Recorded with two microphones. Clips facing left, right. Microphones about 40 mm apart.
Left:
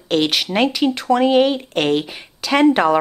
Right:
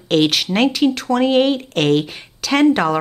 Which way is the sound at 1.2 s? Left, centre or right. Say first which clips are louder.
Right 1 dB; centre.